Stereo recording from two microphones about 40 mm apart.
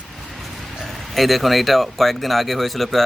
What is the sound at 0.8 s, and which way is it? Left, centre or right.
Speech, centre.